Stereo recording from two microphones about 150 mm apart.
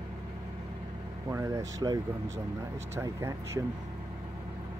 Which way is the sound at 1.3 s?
20° right (ahead or behind).